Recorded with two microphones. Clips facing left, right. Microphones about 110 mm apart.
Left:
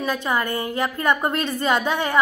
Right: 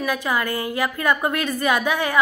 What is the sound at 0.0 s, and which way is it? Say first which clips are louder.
A woman's voice: even; 20° left (ahead or behind).